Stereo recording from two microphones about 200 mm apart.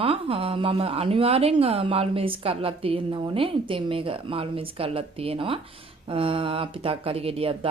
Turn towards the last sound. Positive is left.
turn(degrees=-25)  # may be behind; listen again after turning